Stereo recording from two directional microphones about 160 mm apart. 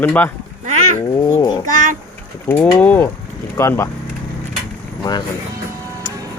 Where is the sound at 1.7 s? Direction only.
55° right (ahead or behind).